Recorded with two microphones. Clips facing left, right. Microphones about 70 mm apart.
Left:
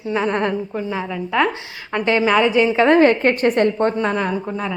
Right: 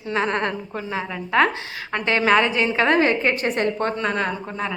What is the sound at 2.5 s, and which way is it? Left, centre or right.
Speech, left.